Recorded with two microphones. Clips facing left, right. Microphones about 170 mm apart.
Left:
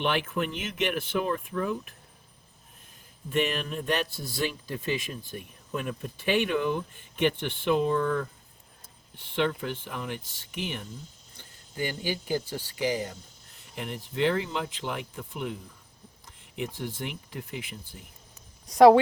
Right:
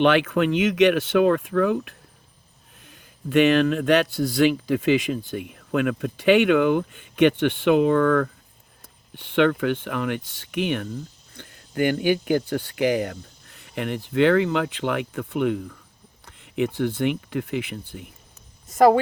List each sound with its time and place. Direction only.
0.0 s speech: 85° right; by 18.0 s 65° right (ahead or behind)
18.6 s a woman's voice: 5° right (ahead or behind)